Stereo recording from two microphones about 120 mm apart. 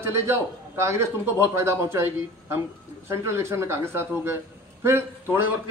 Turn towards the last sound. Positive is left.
turn(degrees=-15)  # may be behind; listen again after turning